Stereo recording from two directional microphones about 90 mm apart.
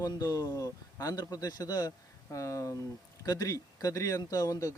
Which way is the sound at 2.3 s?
35° left (ahead or behind).